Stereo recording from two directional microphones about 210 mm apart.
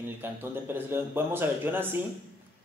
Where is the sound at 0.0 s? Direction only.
10° right (ahead or behind).